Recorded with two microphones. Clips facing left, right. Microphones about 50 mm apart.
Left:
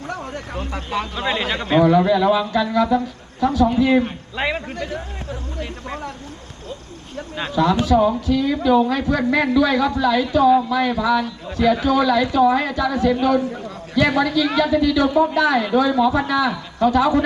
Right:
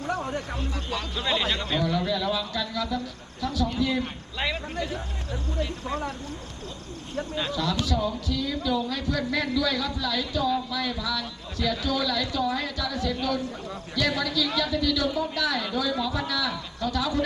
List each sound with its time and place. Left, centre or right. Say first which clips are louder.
0.0 s a sound: even; centre
0.9 s a man's voice: left 6 dB; left
7.3 s speech: left 10 dB; left